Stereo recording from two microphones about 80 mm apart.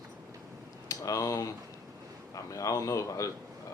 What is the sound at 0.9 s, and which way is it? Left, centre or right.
Speech, left.